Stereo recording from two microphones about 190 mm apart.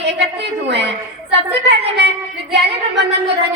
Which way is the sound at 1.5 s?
65° right (ahead or behind).